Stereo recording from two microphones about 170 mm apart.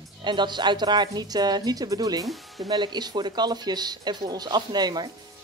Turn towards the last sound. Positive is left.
turn(degrees=-25)  # may be behind; listen again after turning